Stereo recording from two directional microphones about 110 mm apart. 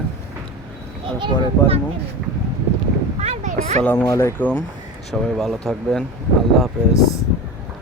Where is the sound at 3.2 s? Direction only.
85° right.